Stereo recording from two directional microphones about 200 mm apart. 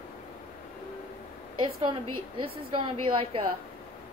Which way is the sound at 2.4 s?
25° right (ahead or behind).